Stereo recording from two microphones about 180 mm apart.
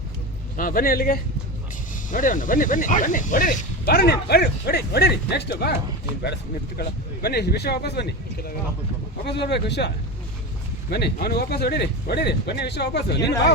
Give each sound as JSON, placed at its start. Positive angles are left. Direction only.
{"t": 0.5, "sound": "speech", "side_deg": 50}